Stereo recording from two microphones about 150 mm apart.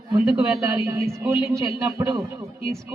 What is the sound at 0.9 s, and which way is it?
Speech, 20° right (ahead or behind).